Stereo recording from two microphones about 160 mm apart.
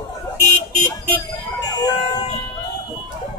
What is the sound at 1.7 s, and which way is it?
Speech, 25° left (ahead or behind).